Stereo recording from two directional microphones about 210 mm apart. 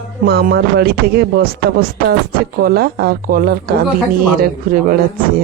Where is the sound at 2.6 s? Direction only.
50° right (ahead or behind).